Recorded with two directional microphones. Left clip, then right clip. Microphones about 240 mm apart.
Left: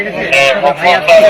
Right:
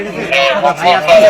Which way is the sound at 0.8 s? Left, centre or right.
Right.